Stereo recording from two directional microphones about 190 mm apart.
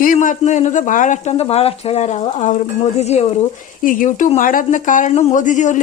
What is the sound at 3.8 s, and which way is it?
A woman's voice, 45° left (ahead or behind).